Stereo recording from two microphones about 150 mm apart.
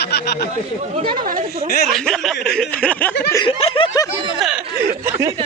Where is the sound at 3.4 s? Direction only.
35° left (ahead or behind).